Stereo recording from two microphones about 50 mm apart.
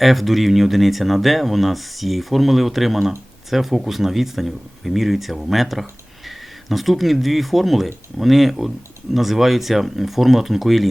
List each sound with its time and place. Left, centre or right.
0.0 s speech: centre